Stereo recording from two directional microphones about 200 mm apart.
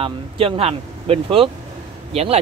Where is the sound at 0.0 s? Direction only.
25° right (ahead or behind).